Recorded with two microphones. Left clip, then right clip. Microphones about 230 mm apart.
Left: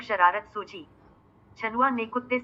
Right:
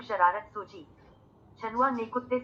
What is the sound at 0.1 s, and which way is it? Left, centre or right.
A woman's voice, left.